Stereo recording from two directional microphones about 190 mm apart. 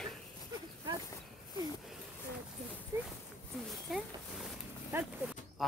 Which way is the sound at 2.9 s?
15° right (ahead or behind).